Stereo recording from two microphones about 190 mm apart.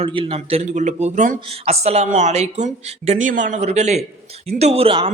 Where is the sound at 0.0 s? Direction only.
30° right (ahead or behind).